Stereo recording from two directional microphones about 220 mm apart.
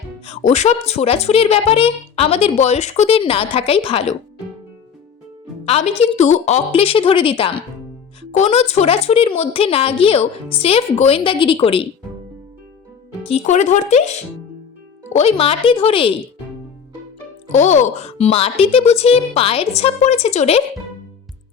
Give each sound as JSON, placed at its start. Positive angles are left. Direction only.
{"t": 0.3, "sound": "a child's voice", "side_deg": 30}
{"t": 5.6, "sound": "a child's voice", "side_deg": 30}
{"t": 13.2, "sound": "speech", "side_deg": 30}
{"t": 15.1, "sound": "a child's voice", "side_deg": 30}
{"t": 17.5, "sound": "a child's voice", "side_deg": 30}